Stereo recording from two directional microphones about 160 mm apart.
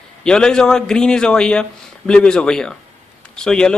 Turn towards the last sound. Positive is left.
turn(degrees=5)  # may be behind; listen again after turning